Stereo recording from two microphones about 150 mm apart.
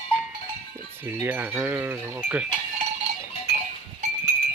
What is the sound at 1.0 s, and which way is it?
Cowbell, 15° right (ahead or behind).